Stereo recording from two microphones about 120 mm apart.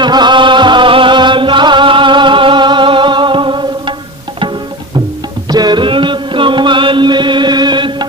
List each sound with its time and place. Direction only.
0.0 s music: 40° right (ahead or behind)
5.5 s music: 35° right (ahead or behind)